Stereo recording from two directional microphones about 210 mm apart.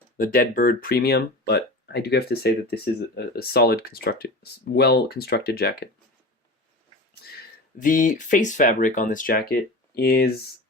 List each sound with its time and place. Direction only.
0.2 s speech: 40° left (ahead or behind)
7.8 s speech: 40° left (ahead or behind)